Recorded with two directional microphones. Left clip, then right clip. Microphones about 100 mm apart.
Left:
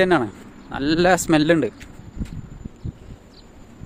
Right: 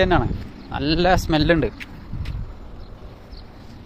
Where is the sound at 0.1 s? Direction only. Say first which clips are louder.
Left 1 dB; 85° left.